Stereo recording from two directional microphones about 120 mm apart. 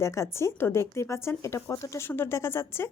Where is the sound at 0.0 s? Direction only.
25° left (ahead or behind).